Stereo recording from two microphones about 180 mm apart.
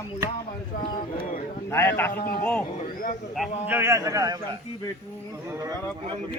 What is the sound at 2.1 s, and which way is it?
Speech, 55° left (ahead or behind).